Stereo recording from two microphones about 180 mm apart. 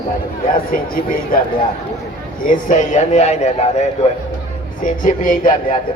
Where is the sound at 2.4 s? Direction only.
45° left (ahead or behind).